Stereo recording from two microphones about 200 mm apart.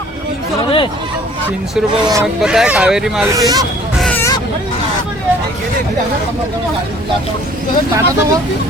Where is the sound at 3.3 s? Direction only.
20° right (ahead or behind).